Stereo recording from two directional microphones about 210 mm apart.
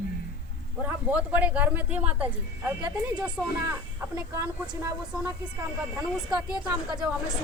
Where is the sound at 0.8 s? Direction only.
10° right (ahead or behind).